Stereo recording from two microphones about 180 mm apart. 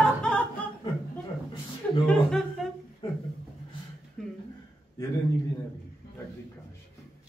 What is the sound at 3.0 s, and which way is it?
Speech, 30° left (ahead or behind).